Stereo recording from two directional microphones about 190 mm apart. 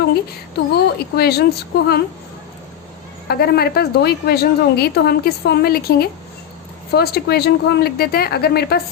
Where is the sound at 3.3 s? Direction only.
55° left (ahead or behind).